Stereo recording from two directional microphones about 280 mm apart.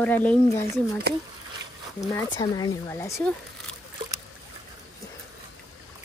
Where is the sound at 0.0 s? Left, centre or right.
Centre.